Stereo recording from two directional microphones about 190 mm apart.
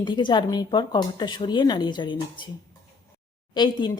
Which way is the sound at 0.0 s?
25° left (ahead or behind).